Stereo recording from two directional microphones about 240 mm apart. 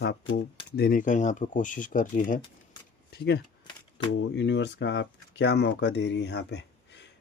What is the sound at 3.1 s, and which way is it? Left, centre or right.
Speech, left.